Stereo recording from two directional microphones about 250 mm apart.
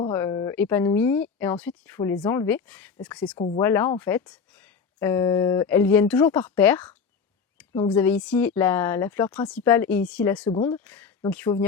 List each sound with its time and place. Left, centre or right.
0.0 s speech: centre
3.3 s speech: left
3.6 s speech: centre
10.5 s speech: left
10.8 s speech: centre